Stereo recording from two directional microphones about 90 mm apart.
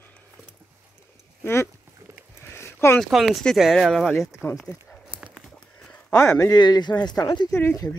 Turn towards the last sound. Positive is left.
turn(degrees=30)  # may be behind; listen again after turning